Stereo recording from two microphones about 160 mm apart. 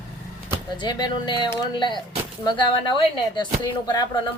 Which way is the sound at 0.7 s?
30° left (ahead or behind).